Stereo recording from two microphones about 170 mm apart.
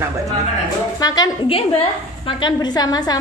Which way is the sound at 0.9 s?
25° left (ahead or behind).